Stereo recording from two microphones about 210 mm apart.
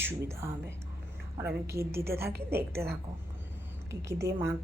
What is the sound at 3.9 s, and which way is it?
Speech, 15° right (ahead or behind).